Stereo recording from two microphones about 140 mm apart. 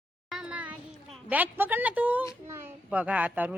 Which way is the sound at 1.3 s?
15° right (ahead or behind).